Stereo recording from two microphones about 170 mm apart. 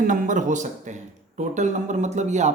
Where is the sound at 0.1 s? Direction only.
50° right (ahead or behind).